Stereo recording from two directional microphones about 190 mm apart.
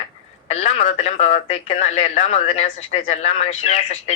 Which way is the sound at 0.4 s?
35° left (ahead or behind).